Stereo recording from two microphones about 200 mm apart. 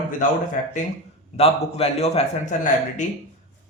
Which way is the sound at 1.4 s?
30° left (ahead or behind).